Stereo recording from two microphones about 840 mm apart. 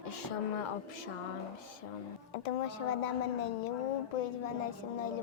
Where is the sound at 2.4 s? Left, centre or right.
Left.